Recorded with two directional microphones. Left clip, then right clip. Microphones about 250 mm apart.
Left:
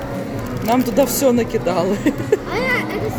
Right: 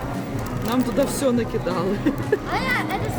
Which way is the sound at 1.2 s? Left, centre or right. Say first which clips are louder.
Left 6 dB; centre.